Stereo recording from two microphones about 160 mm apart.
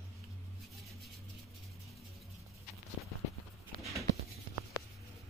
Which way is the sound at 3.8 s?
Centre (ahead or behind).